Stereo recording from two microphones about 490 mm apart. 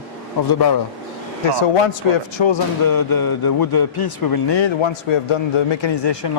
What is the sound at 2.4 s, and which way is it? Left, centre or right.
Speech, left.